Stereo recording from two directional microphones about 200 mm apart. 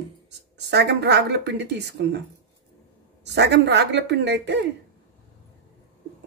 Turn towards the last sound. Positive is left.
turn(degrees=-60)  # may be behind; listen again after turning